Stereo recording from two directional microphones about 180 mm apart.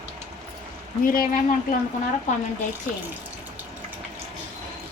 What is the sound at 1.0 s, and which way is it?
Dishes, 50° left (ahead or behind).